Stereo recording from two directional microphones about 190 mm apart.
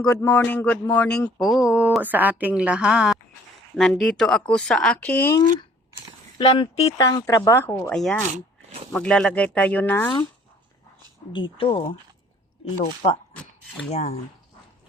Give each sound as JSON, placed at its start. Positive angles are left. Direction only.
{"t": 0.1, "sound": "a sound", "side_deg": 10}
{"t": 6.4, "sound": "speech", "side_deg": 25}
{"t": 11.3, "sound": "speech", "side_deg": 25}